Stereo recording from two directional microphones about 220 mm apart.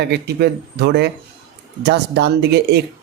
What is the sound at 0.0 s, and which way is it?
Speech, 50° right (ahead or behind).